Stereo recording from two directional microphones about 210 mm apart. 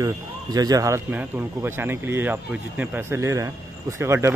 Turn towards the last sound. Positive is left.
turn(degrees=-15)  # may be behind; listen again after turning